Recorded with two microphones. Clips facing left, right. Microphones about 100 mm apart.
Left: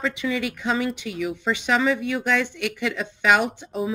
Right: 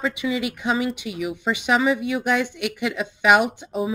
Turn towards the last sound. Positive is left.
turn(degrees=-15)  # may be behind; listen again after turning